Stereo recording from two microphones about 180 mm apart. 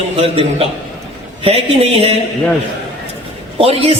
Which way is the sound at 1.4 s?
30° right (ahead or behind).